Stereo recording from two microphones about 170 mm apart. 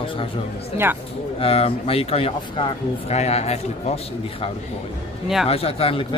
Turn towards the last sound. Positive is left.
turn(degrees=35)  # may be behind; listen again after turning